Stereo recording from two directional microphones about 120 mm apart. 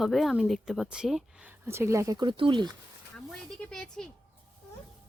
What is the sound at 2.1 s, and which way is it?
Speech, 40° right (ahead or behind).